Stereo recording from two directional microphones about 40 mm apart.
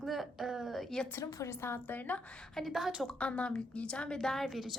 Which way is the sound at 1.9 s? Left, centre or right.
Left.